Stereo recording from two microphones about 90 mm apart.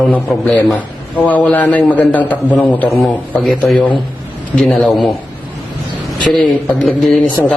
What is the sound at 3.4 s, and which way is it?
A man's voice, centre (ahead or behind).